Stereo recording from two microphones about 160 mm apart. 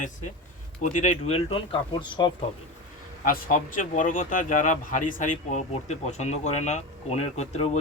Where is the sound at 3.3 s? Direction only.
55° left (ahead or behind).